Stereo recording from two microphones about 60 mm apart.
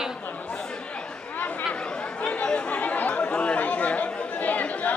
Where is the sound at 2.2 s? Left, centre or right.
Centre.